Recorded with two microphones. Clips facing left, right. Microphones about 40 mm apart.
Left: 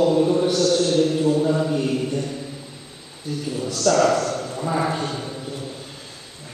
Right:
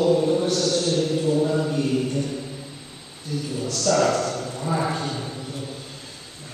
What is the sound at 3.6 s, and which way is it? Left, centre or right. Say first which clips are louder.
A man's voice: left 3 dB; centre.